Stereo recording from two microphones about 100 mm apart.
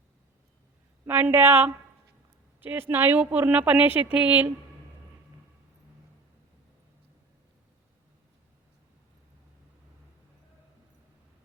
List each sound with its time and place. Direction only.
1.0 s speech: 20° right (ahead or behind)